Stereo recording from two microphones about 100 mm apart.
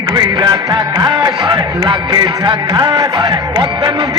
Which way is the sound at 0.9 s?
50° right (ahead or behind).